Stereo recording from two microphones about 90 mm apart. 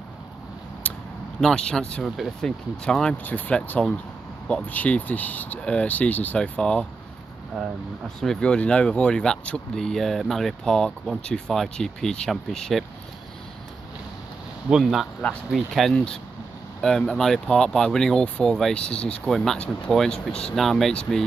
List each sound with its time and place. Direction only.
0.8 s a sound: 15° left (ahead or behind)
1.4 s speech: 10° left (ahead or behind)
2.0 s speech: centre (ahead or behind)
14.7 s speech: 5° right (ahead or behind)